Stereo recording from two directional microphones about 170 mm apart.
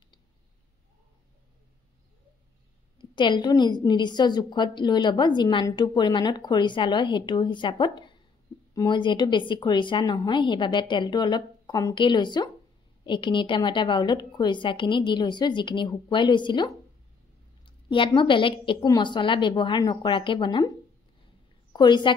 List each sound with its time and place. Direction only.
3.2 s a woman's voice: 25° left (ahead or behind)
21.7 s a woman's voice: 25° left (ahead or behind)